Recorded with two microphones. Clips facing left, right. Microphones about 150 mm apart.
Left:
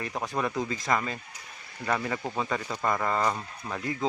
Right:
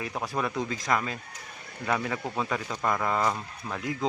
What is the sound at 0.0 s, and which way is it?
Speech, centre (ahead or behind).